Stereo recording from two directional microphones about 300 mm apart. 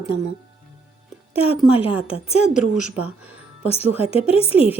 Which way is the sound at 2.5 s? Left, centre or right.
Centre.